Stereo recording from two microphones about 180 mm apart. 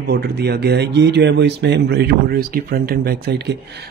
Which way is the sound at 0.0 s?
60° right (ahead or behind).